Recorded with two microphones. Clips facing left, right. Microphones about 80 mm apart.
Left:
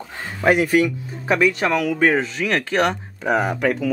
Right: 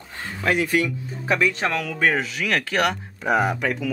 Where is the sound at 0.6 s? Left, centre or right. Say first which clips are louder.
Left 4 dB; centre.